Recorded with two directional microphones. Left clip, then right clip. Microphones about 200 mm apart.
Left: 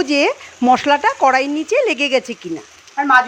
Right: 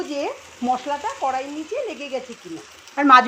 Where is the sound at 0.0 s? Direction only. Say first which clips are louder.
Left 11 dB; 40° left (ahead or behind).